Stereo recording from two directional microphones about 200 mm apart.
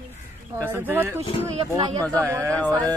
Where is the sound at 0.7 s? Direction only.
10° right (ahead or behind).